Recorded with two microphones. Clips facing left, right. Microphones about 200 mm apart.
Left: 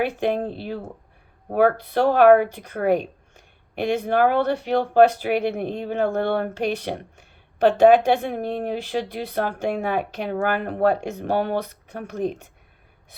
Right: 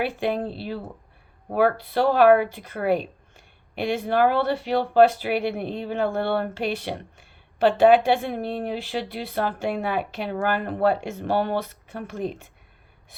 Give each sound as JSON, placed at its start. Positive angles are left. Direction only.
{"t": 0.0, "sound": "speech", "side_deg": 45}